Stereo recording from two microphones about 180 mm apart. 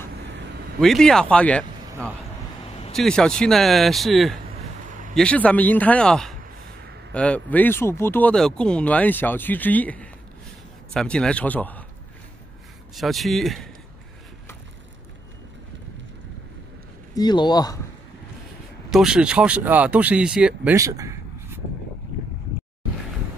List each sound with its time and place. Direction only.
0.7 s speech: 5° left (ahead or behind)
12.9 s speech: centre (ahead or behind)
17.1 s speech: 25° left (ahead or behind)
18.9 s speech: 5° right (ahead or behind)
20.7 s a sound: 20° right (ahead or behind)